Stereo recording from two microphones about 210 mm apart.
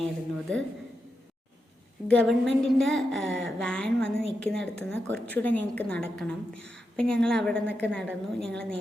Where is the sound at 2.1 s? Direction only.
5° left (ahead or behind).